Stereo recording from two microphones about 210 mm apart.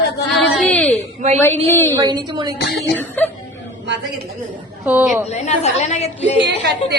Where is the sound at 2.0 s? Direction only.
20° right (ahead or behind).